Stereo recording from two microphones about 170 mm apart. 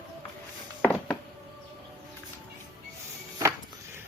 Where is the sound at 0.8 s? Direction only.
10° left (ahead or behind).